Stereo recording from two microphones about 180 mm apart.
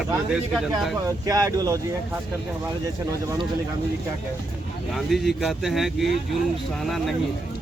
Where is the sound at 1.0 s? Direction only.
20° right (ahead or behind).